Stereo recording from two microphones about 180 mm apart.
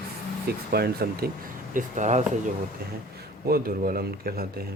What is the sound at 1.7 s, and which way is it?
Speech, 40° right (ahead or behind).